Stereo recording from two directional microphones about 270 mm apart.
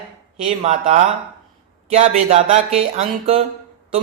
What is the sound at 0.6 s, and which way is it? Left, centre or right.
Speech, right.